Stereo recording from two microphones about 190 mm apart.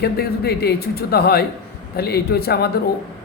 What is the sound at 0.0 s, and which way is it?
A man's voice, 60° left (ahead or behind).